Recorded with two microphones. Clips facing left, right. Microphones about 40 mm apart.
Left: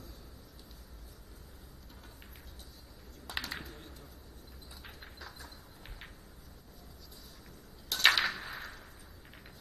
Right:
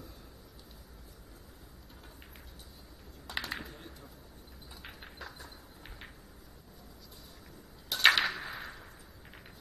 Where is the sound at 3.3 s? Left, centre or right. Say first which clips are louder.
Right 2 dB; centre.